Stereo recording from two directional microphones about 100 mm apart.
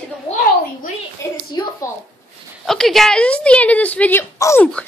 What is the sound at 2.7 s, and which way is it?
Speech, 5° left (ahead or behind).